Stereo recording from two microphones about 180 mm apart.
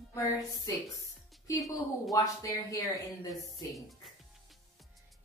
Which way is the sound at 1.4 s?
20° left (ahead or behind).